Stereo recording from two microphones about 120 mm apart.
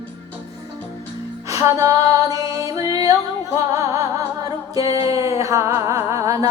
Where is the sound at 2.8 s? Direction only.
45° left (ahead or behind).